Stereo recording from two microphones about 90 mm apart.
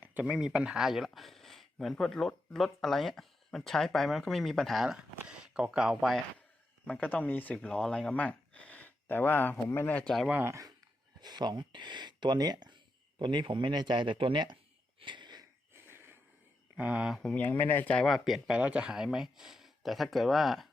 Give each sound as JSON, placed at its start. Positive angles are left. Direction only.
{"t": 0.0, "sound": "a sound", "side_deg": -20}
{"t": 0.3, "sound": "speech", "side_deg": -10}
{"t": 6.8, "sound": "speech", "side_deg": 15}
{"t": 7.5, "sound": "speech", "side_deg": 10}
{"t": 10.4, "sound": "speech", "side_deg": -35}
{"t": 11.2, "sound": "speech", "side_deg": -50}
{"t": 15.0, "sound": "wheeze", "side_deg": -60}
{"t": 15.9, "sound": "wheeze", "side_deg": -25}
{"t": 16.7, "sound": "speech", "side_deg": -15}
{"t": 17.2, "sound": "speech", "side_deg": 15}
{"t": 18.0, "sound": "speech", "side_deg": 0}